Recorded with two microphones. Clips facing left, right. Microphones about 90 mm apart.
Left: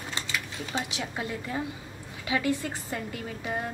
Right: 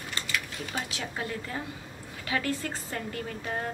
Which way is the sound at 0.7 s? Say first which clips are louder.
Left 3 dB; 20° left (ahead or behind).